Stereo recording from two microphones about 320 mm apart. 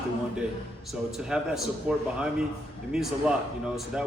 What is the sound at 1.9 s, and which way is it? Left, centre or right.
Speech, centre.